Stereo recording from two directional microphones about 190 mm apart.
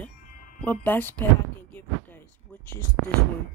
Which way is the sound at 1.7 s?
10° left (ahead or behind).